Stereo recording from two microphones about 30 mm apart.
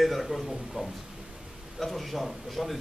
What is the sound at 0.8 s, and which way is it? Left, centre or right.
Speech, right.